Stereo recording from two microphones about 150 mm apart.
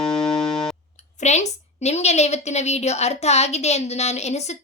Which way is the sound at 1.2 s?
50° left (ahead or behind).